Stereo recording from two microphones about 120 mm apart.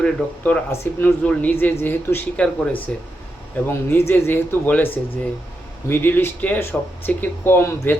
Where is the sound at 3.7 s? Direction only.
20° left (ahead or behind).